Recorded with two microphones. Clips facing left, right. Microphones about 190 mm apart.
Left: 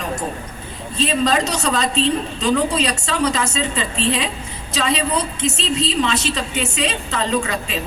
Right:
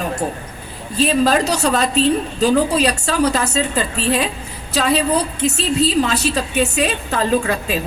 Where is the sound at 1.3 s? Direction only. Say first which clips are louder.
Right 3 dB; 60° right (ahead or behind).